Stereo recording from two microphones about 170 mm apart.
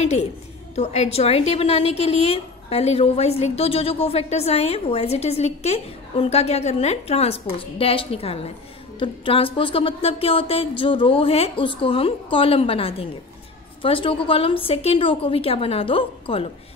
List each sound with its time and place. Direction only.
0.7 s a woman's voice: 40° left (ahead or behind)